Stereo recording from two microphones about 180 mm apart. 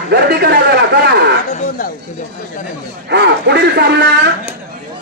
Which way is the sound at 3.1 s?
70° right (ahead or behind).